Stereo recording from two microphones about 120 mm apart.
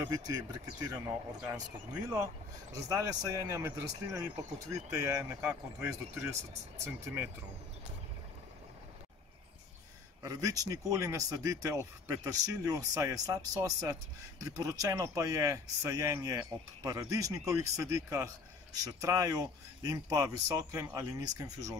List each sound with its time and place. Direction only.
0.1 s speech: 30° right (ahead or behind)
0.9 s speech: 10° right (ahead or behind)
2.7 s speech: 30° right (ahead or behind)
10.2 s speech: 30° right (ahead or behind)